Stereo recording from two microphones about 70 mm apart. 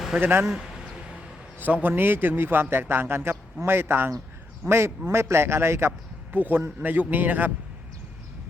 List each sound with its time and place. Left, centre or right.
0.2 s a man's voice: right
0.4 s speech: centre
1.5 s a man's voice: right
6.3 s a man's voice: right